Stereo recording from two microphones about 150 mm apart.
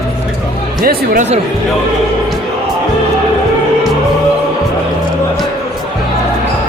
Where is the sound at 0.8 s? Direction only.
70° right (ahead or behind).